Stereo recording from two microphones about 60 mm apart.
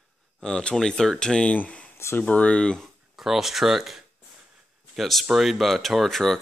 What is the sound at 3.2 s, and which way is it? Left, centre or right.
Speech, centre.